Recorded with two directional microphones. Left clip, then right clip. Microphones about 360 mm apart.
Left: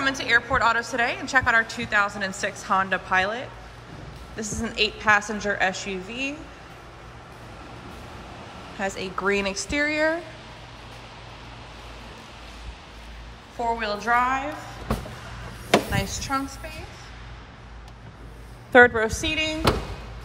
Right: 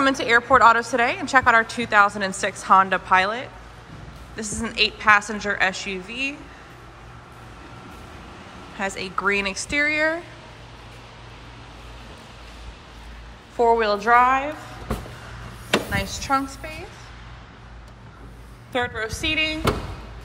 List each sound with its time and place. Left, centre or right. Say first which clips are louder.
0.0 s a woman's voice: right 3 dB; centre
8.7 s a woman's voice: right 2 dB; centre
13.6 s a woman's voice: right 8 dB; centre
15.9 s a woman's voice: right 4 dB; centre
18.7 s a woman's voice: left 10 dB; centre